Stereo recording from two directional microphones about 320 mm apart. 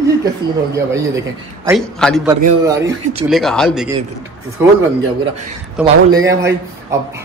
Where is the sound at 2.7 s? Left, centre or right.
Centre.